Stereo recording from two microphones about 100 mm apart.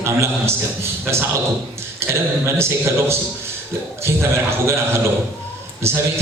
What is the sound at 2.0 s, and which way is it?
Speech, 25° right (ahead or behind).